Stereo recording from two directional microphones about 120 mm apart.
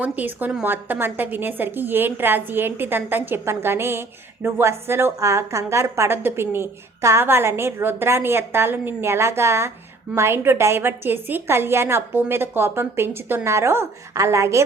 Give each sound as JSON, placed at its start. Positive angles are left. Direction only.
{"t": 0.0, "sound": "a woman's voice", "side_deg": -15}